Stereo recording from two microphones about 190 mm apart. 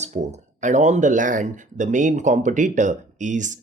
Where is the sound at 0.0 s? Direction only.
35° right (ahead or behind).